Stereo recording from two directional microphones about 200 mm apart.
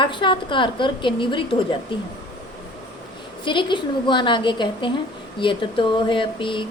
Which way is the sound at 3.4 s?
25° left (ahead or behind).